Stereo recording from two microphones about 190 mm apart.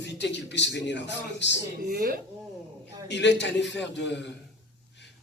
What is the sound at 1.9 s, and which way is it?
Speech, 55° right (ahead or behind).